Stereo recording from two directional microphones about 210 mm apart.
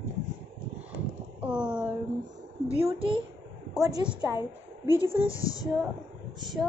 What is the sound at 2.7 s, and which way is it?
A woman's voice, 25° right (ahead or behind).